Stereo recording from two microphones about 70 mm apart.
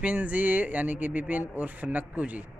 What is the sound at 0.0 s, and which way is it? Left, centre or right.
A man's voice, right.